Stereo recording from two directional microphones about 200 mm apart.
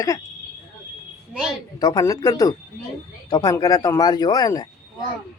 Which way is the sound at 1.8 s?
20° left (ahead or behind).